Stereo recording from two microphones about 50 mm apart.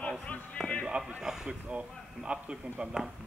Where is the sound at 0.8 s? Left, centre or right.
Centre.